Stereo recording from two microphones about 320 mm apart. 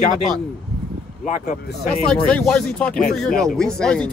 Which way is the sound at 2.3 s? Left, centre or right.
Centre.